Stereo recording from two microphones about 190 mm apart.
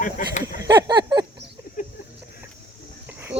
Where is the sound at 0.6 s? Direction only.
20° right (ahead or behind).